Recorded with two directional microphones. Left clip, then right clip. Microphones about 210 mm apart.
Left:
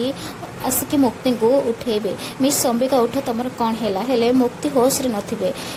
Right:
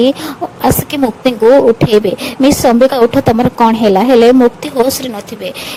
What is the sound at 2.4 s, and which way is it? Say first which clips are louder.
Speech: right 11 dB; 35° right (ahead or behind).